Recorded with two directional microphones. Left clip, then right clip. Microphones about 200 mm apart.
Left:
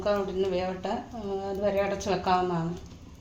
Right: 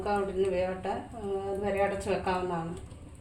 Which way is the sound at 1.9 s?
35° left (ahead or behind).